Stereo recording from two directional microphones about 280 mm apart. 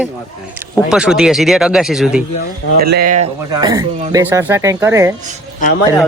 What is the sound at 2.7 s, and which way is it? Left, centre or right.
Speech, right.